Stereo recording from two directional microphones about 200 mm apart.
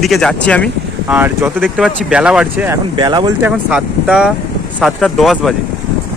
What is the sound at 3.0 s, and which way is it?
Speech, 20° right (ahead or behind).